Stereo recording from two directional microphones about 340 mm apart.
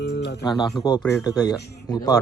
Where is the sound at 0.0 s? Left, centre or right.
Left.